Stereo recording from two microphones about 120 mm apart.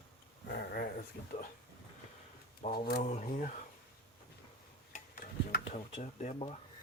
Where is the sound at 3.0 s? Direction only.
90° left.